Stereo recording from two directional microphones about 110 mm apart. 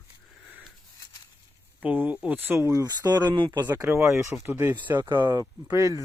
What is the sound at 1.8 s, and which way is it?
Speech, 15° right (ahead or behind).